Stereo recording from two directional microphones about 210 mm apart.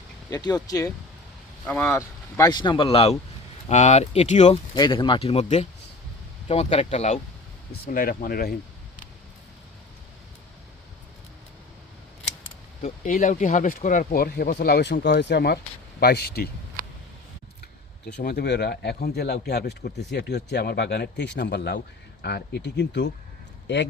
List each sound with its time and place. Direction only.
0.3 s speech: 15° left (ahead or behind)
7.7 s speech: 45° left (ahead or behind)
12.8 s speech: 40° left (ahead or behind)
17.6 s speech: 50° left (ahead or behind)